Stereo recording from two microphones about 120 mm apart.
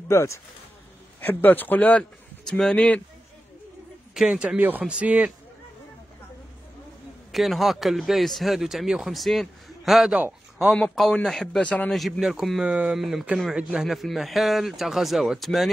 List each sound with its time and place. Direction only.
0.1 s a man's voice: 25° left (ahead or behind)
4.1 s a man's voice: 5° right (ahead or behind)
7.3 s speech: centre (ahead or behind)